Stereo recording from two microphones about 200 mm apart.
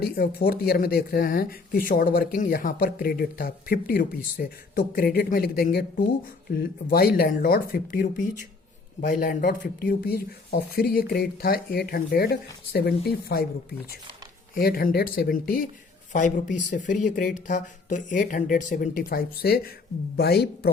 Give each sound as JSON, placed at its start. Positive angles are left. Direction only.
{"t": 0.0, "sound": "speech", "side_deg": 50}